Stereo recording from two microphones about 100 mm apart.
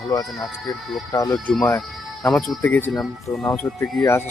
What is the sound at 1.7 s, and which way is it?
Speech, 5° left (ahead or behind).